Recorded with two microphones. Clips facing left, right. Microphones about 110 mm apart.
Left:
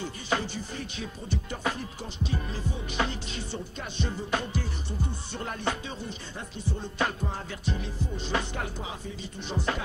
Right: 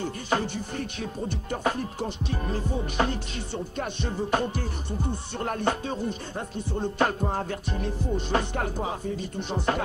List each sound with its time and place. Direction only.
0.0 s music: 50° right (ahead or behind)